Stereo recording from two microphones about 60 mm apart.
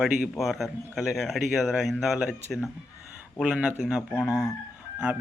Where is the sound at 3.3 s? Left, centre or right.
Centre.